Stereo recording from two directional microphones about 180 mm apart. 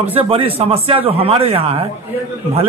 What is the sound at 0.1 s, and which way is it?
A man's voice, 30° right (ahead or behind).